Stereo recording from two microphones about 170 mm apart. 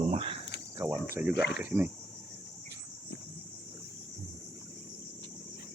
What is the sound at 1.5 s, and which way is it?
Speech, 10° right (ahead or behind).